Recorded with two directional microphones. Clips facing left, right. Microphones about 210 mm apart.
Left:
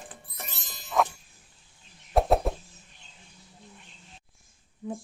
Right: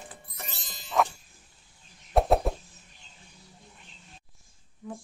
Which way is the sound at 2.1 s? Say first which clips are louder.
Even; centre (ahead or behind).